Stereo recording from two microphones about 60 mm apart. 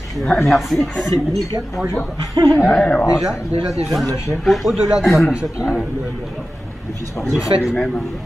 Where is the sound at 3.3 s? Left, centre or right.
Left.